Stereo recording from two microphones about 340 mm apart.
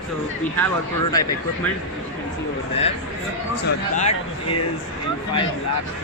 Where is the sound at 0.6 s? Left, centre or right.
Centre.